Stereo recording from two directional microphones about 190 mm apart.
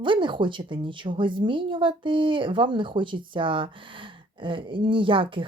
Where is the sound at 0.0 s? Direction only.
25° right (ahead or behind).